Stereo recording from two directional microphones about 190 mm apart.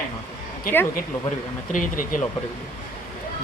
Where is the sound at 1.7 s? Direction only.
45° left (ahead or behind).